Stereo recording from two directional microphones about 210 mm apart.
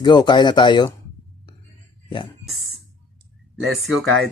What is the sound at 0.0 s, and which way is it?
Speech, 20° left (ahead or behind).